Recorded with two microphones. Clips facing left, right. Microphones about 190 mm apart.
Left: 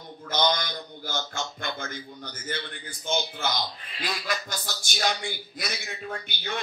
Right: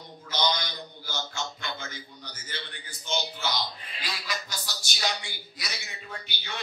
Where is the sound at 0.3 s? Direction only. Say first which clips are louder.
Left 3 dB; 50° left (ahead or behind).